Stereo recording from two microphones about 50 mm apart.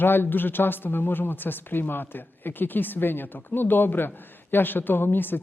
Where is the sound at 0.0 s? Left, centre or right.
Left.